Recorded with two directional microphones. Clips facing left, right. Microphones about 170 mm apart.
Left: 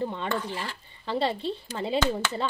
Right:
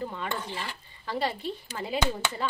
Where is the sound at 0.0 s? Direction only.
25° left (ahead or behind).